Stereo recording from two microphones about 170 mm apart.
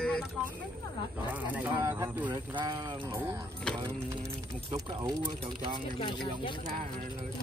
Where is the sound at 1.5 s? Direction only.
10° right (ahead or behind).